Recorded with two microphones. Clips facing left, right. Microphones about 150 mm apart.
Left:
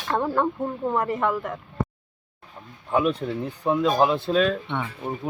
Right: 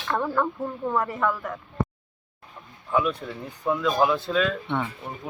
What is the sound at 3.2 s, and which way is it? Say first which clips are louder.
Speech: left 3 dB; 35° left (ahead or behind).